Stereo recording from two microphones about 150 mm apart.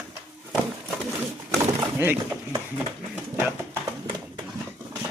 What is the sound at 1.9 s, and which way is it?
Speech, 15° right (ahead or behind).